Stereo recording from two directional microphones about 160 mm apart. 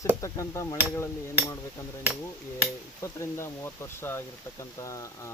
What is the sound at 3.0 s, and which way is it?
Speech, 15° left (ahead or behind).